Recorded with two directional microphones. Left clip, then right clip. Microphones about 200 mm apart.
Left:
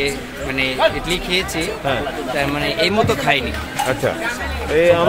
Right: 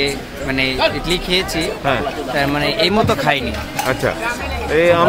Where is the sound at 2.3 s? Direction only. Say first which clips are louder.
Right 3 dB; 20° right (ahead or behind).